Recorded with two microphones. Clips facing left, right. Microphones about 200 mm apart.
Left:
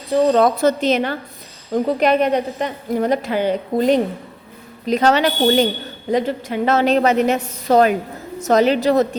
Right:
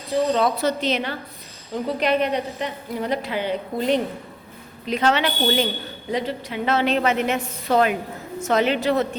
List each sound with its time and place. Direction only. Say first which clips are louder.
0.1 s a woman's voice: left 6 dB; 50° left (ahead or behind)